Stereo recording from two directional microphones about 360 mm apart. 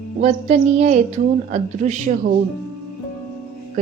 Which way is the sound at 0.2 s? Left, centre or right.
Centre.